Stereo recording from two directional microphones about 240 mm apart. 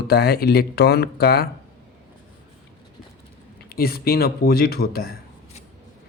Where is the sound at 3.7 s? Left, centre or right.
Left.